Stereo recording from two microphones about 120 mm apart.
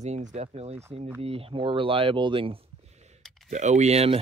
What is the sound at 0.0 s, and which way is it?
Speech, 75° right (ahead or behind).